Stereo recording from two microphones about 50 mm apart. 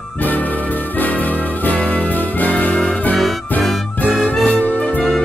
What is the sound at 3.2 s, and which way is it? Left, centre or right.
Music, centre.